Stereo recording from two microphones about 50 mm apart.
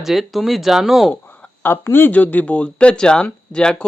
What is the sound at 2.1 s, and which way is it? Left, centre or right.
Speech, left.